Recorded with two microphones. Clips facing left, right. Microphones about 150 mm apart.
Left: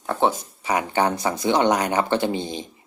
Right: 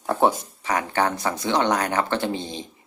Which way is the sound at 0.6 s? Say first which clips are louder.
Left 2 dB; 15° left (ahead or behind).